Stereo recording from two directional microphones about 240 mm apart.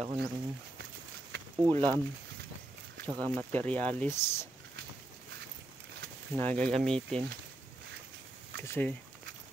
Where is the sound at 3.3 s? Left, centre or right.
Centre.